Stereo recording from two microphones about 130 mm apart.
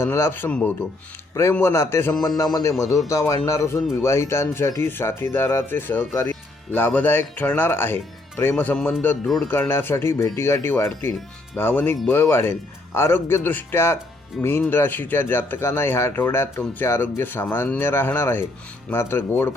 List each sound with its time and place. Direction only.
0.0 s speech: 20° left (ahead or behind)
9.2 s speech: centre (ahead or behind)
9.5 s speech: 15° left (ahead or behind)